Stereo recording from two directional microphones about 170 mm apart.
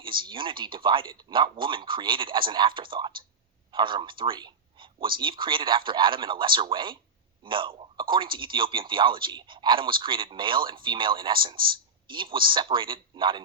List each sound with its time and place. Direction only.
0.0 s a man's voice: 30° right (ahead or behind)